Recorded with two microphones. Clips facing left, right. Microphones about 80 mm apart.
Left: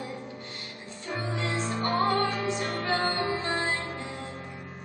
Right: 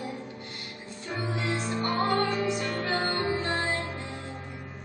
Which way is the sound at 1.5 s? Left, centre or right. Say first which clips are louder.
Left 1 dB; left.